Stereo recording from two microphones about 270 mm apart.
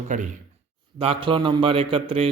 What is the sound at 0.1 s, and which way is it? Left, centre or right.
Speech, right.